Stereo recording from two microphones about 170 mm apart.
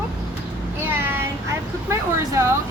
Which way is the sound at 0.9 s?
15° right (ahead or behind).